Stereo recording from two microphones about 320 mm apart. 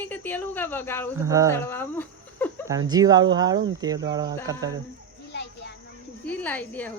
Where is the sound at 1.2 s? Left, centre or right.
Centre.